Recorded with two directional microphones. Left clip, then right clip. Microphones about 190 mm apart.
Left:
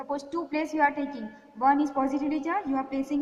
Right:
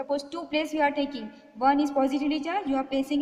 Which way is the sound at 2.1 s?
55° right (ahead or behind).